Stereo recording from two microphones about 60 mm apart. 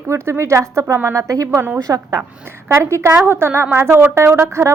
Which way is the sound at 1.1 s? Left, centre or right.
Right.